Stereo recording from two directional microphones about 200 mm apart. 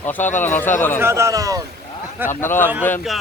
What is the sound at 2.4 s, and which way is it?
Speech, 10° left (ahead or behind).